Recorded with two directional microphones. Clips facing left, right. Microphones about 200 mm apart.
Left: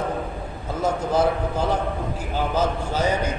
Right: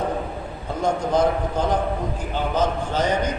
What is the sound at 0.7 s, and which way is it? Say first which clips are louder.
A man's voice: right 1 dB; 5° left (ahead or behind).